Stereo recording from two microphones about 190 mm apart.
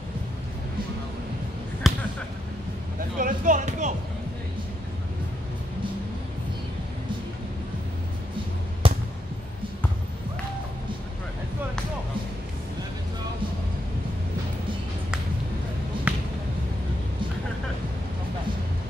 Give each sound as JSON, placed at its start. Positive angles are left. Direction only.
{"t": 1.8, "sound": "basketball bounce", "side_deg": 0}
{"t": 3.2, "sound": "music", "side_deg": -45}
{"t": 8.8, "sound": "fireworks", "side_deg": -30}
{"t": 16.1, "sound": "a sound", "side_deg": -5}